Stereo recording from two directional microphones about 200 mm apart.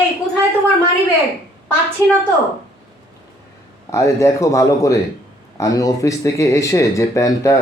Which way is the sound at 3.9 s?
15° left (ahead or behind).